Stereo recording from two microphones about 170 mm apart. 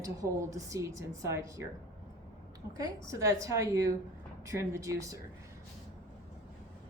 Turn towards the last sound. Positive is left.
turn(degrees=-20)  # may be behind; listen again after turning